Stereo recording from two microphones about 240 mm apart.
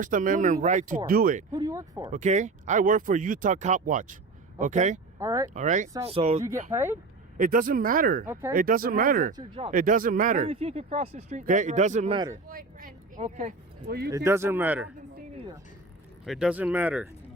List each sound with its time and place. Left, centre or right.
0.0 s speech: right
1.5 s speech: centre
2.1 s speech: right
5.2 s speech: centre
5.5 s speech: right
6.7 s speech: centre
7.3 s speech: right
8.3 s speech: centre
8.5 s speech: right
9.3 s speech: centre
9.7 s speech: right; by 12.4 s centre
12.5 s speech: right
14.3 s speech: centre
16.2 s speech: centre